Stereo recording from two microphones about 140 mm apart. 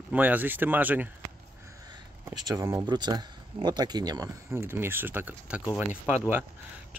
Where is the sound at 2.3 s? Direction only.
25° right (ahead or behind); by 5.6 s 10° right (ahead or behind).